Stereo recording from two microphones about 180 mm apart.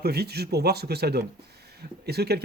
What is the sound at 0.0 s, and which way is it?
Speech, 60° right (ahead or behind).